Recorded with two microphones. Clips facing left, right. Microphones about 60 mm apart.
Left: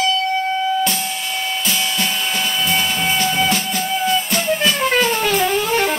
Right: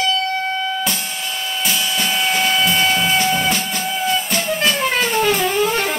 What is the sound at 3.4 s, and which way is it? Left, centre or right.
Music, centre.